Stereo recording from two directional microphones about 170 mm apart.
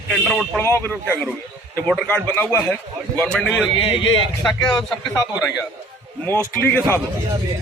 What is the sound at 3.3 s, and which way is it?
Speech, centre (ahead or behind).